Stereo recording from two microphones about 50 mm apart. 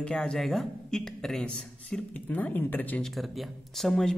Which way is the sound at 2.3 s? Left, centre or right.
Left.